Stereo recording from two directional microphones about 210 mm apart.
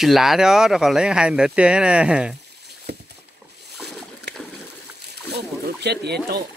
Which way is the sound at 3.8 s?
Centre (ahead or behind).